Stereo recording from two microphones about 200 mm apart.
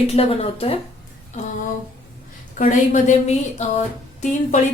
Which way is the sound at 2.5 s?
40° left (ahead or behind).